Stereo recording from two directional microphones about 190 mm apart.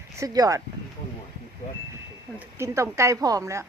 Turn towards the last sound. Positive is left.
turn(degrees=-15)  # may be behind; listen again after turning